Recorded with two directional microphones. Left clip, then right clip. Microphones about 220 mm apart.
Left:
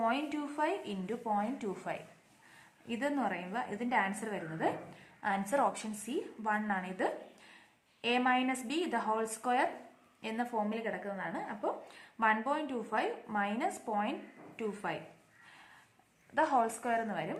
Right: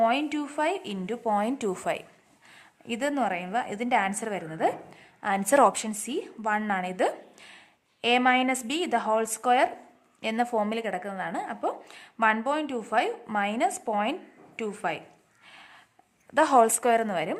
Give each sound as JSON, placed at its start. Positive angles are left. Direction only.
{"t": 0.0, "sound": "a woman's voice", "side_deg": -40}
{"t": 16.3, "sound": "speech", "side_deg": -50}